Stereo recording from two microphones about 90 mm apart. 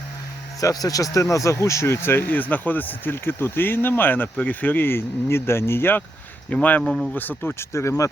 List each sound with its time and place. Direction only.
0.6 s speech: 40° left (ahead or behind); by 6.8 s 15° left (ahead or behind)
6.8 s speech: centre (ahead or behind)
7.1 s speech: 20° left (ahead or behind)